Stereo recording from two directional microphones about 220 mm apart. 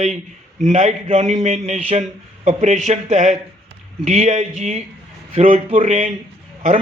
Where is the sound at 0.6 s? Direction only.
30° right (ahead or behind).